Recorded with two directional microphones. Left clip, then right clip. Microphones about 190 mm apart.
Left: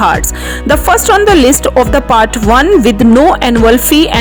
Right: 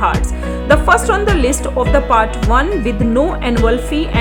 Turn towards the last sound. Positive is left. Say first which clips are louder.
# left 9 dB
turn(degrees=45)  # may be behind; listen again after turning